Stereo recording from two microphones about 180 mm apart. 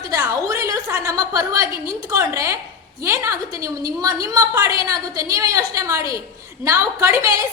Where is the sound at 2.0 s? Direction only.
15° right (ahead or behind).